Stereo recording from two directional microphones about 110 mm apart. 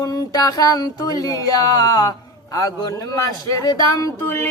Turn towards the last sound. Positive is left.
turn(degrees=20)  # may be behind; listen again after turning